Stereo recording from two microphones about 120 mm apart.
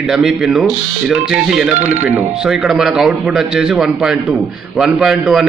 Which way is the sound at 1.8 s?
75° right (ahead or behind).